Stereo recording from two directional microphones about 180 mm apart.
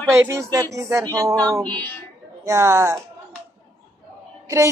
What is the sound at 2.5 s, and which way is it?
Speech, 15° right (ahead or behind).